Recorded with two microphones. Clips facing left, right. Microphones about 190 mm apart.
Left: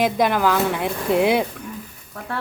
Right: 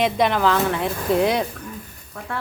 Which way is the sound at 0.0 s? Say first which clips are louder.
Even; 5° left (ahead or behind).